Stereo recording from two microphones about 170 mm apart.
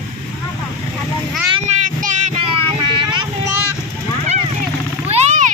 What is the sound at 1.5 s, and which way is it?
Child singing, 40° right (ahead or behind).